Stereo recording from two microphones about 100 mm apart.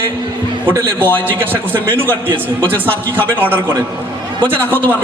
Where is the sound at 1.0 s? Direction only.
20° left (ahead or behind).